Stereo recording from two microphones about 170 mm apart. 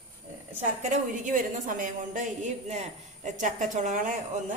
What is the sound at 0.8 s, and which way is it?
A woman's voice, 50° right (ahead or behind).